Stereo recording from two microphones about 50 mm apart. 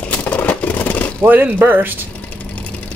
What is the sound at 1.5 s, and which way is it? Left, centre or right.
Speech, right.